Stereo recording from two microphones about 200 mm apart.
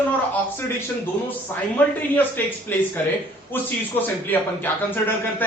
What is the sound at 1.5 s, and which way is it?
Speech, 10° left (ahead or behind).